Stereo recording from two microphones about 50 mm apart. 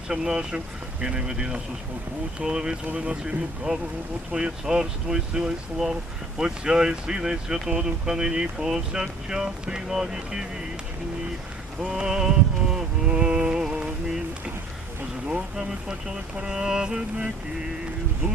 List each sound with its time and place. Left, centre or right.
0.1 s speech: centre
11.9 s music: centre
15.3 s speech: centre